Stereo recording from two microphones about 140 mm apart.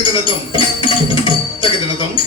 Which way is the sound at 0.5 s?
40° left (ahead or behind).